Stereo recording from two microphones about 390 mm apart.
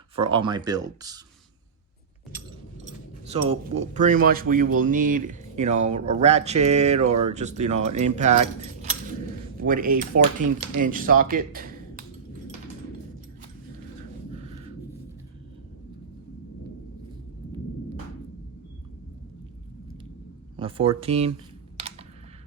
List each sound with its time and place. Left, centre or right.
0.2 s speech: centre
3.2 s speech: centre
20.6 s speech: centre
21.8 s computer keyboard: centre